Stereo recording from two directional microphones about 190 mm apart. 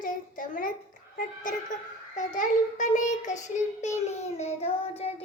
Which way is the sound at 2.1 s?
40° left (ahead or behind).